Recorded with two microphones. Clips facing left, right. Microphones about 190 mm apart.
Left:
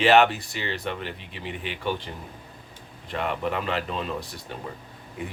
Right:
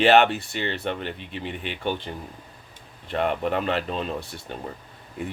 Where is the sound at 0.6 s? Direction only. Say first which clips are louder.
Right 2 dB; 35° right (ahead or behind).